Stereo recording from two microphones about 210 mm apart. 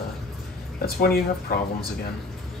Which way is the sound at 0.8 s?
45° left (ahead or behind).